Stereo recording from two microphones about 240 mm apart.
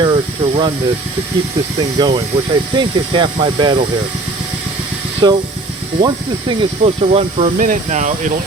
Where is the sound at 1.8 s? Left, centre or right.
Centre.